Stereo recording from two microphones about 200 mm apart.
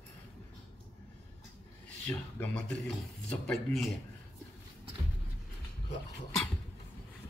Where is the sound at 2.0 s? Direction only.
5° left (ahead or behind).